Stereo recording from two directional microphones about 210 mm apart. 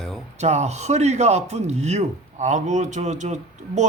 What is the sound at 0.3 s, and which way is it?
A man's voice, 30° right (ahead or behind).